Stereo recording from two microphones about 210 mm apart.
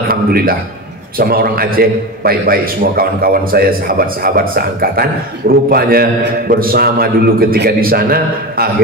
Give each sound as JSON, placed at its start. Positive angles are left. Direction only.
{"t": 0.1, "sound": "a man's voice", "side_deg": -45}